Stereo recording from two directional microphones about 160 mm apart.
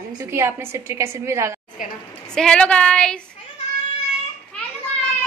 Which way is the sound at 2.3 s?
5° left (ahead or behind).